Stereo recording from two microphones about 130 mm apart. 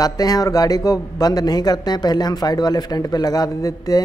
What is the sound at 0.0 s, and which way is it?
A man's voice, 30° left (ahead or behind).